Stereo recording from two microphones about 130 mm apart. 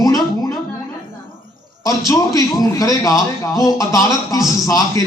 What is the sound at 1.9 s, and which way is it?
A man's voice, 25° left (ahead or behind).